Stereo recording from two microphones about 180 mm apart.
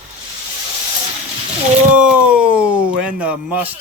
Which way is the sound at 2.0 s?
5° right (ahead or behind).